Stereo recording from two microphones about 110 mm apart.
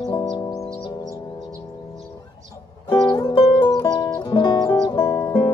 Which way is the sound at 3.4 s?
50° left (ahead or behind).